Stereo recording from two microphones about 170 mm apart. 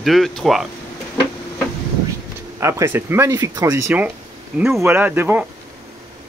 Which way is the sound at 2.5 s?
15° right (ahead or behind).